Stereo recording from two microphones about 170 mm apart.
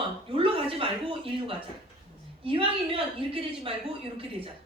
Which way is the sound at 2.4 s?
30° right (ahead or behind).